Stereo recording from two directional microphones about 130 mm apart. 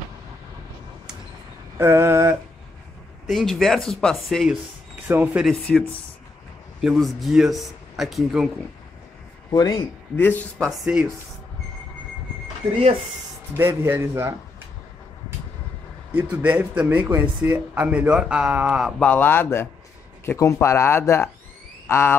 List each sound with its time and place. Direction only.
1.8 s a sound: 20° right (ahead or behind)
3.3 s speech: centre (ahead or behind)
5.0 s speech: 15° right (ahead or behind)
5.7 s speech: centre (ahead or behind)
9.5 s speech: 30° left (ahead or behind)
10.1 s speech: 15° left (ahead or behind)
10.7 s speech: 5° right (ahead or behind)
13.6 s a man's voice: 15° right (ahead or behind)
16.1 s speech: 15° right (ahead or behind); by 22.1 s 20° left (ahead or behind)